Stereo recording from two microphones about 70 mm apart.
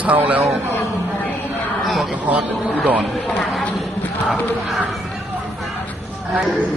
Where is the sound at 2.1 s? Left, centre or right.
Right.